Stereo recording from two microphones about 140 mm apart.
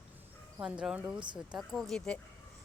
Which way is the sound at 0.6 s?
5° right (ahead or behind).